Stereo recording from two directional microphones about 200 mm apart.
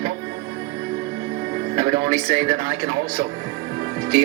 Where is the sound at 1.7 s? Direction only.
30° right (ahead or behind).